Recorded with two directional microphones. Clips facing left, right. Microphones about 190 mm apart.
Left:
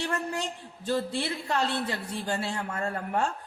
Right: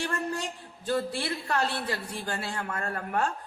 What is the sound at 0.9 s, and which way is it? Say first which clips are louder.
A man's voice: even; 25° left (ahead or behind).